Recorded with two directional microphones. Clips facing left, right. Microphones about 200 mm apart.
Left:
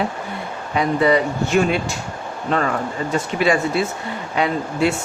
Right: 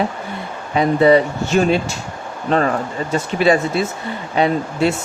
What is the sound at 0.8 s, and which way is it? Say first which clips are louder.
Speech: right 4 dB; 30° right (ahead or behind).